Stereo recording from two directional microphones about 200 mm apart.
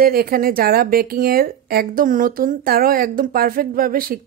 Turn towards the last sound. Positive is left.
turn(degrees=-45)  # may be behind; listen again after turning